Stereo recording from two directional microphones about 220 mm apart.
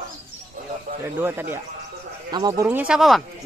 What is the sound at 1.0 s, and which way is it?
Speech, 10° right (ahead or behind).